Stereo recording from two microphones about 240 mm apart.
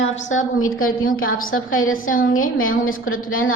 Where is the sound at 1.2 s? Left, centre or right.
Left.